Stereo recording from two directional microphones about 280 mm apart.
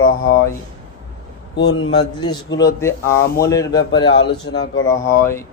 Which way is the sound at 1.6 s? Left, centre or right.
Left.